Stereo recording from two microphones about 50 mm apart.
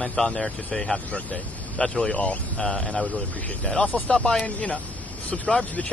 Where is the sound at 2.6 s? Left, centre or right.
Centre.